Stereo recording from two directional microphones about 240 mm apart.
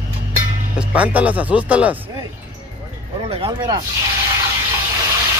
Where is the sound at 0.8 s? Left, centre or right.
Centre.